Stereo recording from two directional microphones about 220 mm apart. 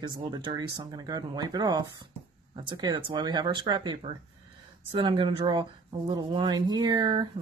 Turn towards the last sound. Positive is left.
turn(degrees=-20)  # may be behind; listen again after turning